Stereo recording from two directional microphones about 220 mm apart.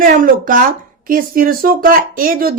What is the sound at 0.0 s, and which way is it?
Speech, 35° right (ahead or behind).